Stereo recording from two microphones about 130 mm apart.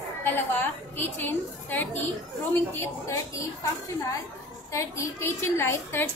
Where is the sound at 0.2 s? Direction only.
15° left (ahead or behind).